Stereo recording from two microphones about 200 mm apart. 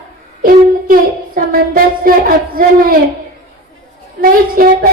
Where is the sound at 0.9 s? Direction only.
45° right (ahead or behind).